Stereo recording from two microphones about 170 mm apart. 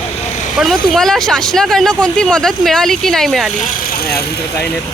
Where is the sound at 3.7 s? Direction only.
60° left (ahead or behind).